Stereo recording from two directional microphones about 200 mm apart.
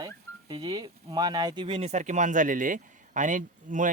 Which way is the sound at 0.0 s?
20° right (ahead or behind).